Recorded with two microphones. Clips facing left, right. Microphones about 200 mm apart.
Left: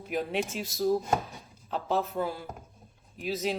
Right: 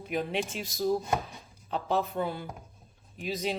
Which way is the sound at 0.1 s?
Centre (ahead or behind).